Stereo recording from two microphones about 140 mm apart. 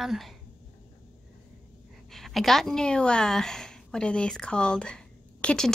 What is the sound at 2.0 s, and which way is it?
A woman's voice, centre (ahead or behind).